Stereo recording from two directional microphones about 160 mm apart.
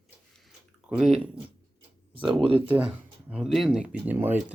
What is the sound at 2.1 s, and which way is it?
Speech, 30° right (ahead or behind).